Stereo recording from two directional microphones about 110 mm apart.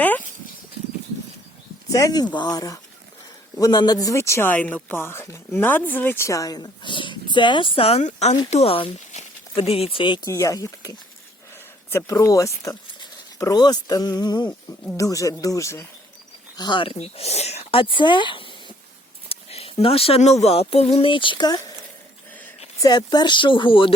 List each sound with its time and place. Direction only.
1.9 s speech: 30° left (ahead or behind)
4.0 s a woman's voice: 25° left (ahead or behind); by 10.2 s 50° left (ahead or behind)
10.2 s a woman's voice: 30° left (ahead or behind)
16.6 s speech: 45° left (ahead or behind)
19.3 s speech: 65° left (ahead or behind)
21.1 s speech: 50° left (ahead or behind)
22.8 s speech: 40° left (ahead or behind)